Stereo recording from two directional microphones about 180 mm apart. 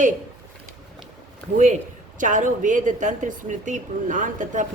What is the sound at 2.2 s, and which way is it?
Speech, 45° right (ahead or behind).